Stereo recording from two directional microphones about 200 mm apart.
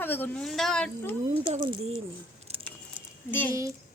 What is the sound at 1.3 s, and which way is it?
Speech, 25° right (ahead or behind).